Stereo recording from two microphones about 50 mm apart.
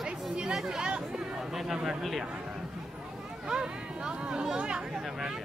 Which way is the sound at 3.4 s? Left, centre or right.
Centre.